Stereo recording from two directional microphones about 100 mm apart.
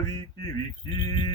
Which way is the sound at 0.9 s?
50° left (ahead or behind).